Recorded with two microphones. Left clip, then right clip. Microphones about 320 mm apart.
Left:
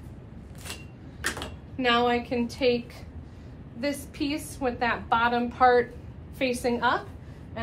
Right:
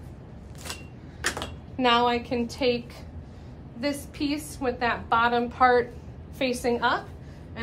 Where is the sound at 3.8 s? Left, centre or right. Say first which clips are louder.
Right 1 dB; centre.